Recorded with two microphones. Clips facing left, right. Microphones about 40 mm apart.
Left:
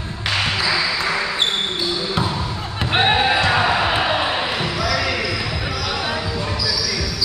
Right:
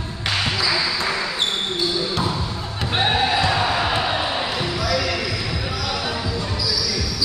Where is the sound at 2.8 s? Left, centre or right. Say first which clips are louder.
Left 3 dB; left.